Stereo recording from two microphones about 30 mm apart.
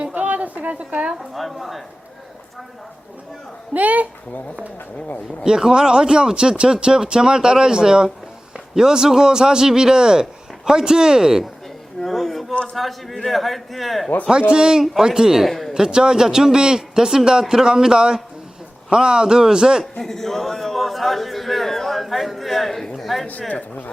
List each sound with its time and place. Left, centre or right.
0.1 s a sound: right
1.2 s a man's voice: centre
3.8 s speech: right
5.5 s a man's voice: right
8.5 s a sound: centre
9.0 s a man's voice: centre
12.0 s a sound: centre
12.7 s a man's voice: centre
14.3 s a man's voice: right
15.4 s a man's voice: centre
15.7 s a man's voice: right
19.8 s a man's voice: centre
20.7 s a sound: centre
23.5 s speech: left